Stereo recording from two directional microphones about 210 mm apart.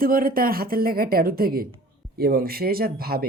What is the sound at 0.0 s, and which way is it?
Speech, 45° right (ahead or behind).